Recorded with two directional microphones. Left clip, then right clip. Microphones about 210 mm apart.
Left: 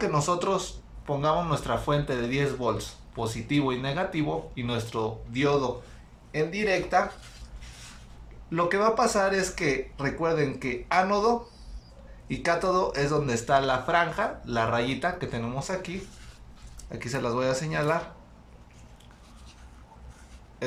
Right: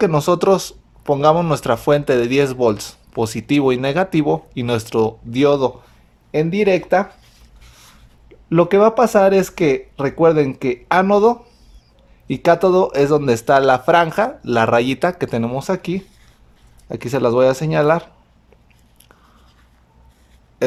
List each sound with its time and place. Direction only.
0.0 s speech: 55° right (ahead or behind)
8.4 s speech: 55° right (ahead or behind)
20.6 s speech: 50° right (ahead or behind)